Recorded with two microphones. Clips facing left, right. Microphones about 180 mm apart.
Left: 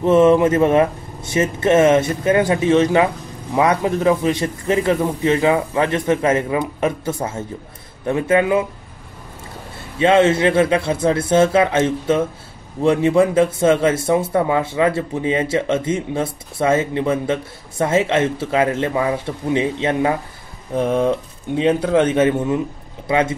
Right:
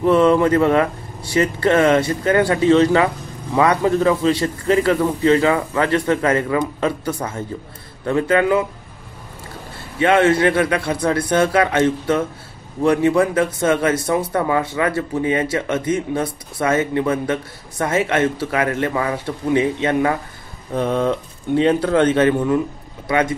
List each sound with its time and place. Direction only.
0.0 s a man's voice: 20° left (ahead or behind)
9.9 s a man's voice: 25° left (ahead or behind)
23.0 s speech: 25° left (ahead or behind)